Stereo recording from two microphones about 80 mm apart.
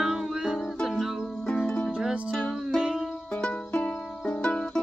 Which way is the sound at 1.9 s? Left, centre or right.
Centre.